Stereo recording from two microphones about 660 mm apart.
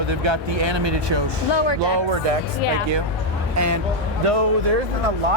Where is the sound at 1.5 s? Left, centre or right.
Left.